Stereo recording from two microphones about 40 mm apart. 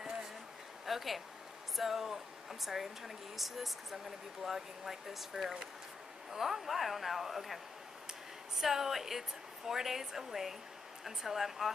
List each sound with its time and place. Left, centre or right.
0.8 s speech: centre